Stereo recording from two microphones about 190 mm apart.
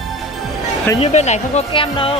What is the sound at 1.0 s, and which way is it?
Speech, 35° left (ahead or behind).